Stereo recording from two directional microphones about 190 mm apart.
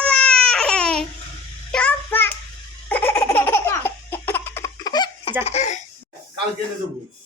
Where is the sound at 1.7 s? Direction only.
5° left (ahead or behind).